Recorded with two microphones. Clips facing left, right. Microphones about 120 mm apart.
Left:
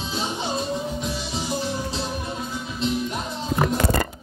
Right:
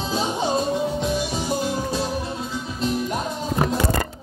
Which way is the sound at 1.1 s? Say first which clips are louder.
Right 4 dB; 50° right (ahead or behind).